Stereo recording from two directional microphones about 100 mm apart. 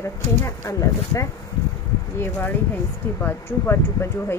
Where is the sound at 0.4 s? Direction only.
30° left (ahead or behind).